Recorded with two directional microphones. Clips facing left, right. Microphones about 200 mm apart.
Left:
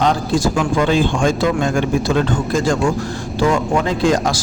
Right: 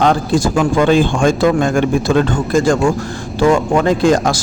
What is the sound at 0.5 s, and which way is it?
Speech, 50° right (ahead or behind).